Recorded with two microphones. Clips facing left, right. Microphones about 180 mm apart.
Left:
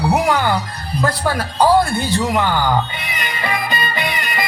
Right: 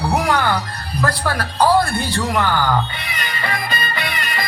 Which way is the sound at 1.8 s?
20° left (ahead or behind).